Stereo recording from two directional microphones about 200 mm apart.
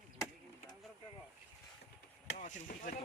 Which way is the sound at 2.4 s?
40° left (ahead or behind).